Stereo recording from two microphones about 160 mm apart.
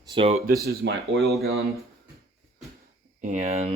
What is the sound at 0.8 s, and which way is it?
Speech, 90° right.